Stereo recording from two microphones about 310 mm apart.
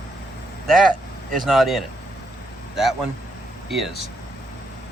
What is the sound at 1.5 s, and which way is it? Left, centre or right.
Speech, centre.